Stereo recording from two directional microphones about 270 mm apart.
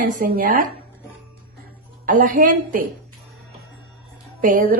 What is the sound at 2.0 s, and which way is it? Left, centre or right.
Speech, right.